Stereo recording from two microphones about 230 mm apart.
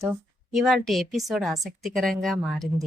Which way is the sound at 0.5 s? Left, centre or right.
Centre.